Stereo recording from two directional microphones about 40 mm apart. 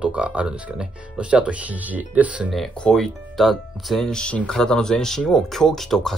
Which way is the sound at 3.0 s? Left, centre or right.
Centre.